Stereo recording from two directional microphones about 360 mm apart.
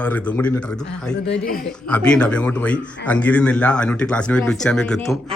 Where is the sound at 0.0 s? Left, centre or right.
Centre.